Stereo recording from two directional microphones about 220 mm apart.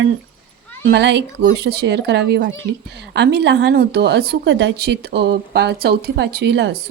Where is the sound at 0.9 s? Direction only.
50° right (ahead or behind).